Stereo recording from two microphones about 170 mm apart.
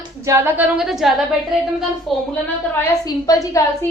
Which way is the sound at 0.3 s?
15° right (ahead or behind).